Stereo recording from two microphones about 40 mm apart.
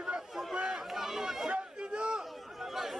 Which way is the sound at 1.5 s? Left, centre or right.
Right.